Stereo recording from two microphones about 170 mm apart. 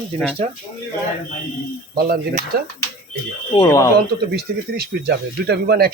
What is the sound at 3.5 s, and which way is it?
Speech, 20° left (ahead or behind).